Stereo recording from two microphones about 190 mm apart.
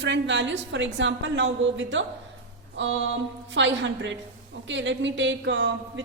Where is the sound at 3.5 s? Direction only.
75° right (ahead or behind).